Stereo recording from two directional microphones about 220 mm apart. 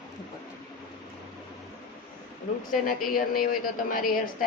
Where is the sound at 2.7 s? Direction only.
40° left (ahead or behind).